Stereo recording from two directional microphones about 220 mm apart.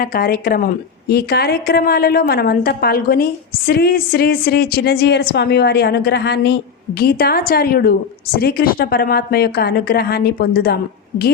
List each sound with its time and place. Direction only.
0.0 s a woman's voice: 40° left (ahead or behind)